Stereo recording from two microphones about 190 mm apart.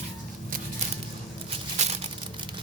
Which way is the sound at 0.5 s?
45° right (ahead or behind).